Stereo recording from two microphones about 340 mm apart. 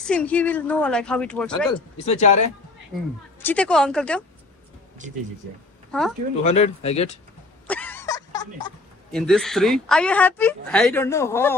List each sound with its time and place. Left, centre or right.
0.0 s speech: centre
2.0 s speech: left
3.3 s speech: centre
5.0 s speech: right
5.9 s speech: centre
6.4 s speech: centre
7.6 s a sound: centre
9.1 s speech: centre